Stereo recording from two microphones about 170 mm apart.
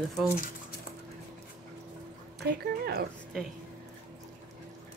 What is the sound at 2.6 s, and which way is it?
Speech, 65° right (ahead or behind).